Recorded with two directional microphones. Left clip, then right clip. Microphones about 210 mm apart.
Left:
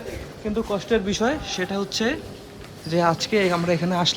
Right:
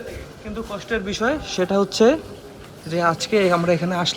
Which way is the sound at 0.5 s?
25° left (ahead or behind).